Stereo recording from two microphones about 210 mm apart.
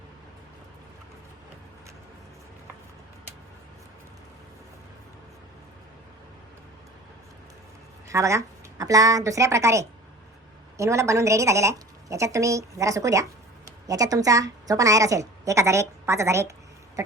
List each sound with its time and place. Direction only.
8.0 s a woman's voice: 15° right (ahead or behind)